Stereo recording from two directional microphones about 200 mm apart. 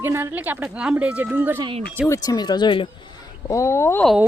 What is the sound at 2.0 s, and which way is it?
Speech, 15° left (ahead or behind).